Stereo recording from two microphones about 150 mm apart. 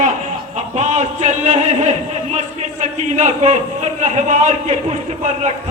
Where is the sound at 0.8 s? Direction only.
50° right (ahead or behind).